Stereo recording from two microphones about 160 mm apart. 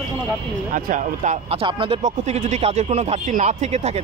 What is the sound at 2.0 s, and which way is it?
Speech, 45° right (ahead or behind).